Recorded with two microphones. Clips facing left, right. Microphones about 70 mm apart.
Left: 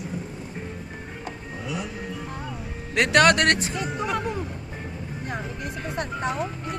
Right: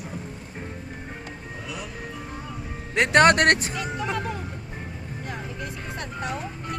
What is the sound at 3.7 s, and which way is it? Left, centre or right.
Speech, left.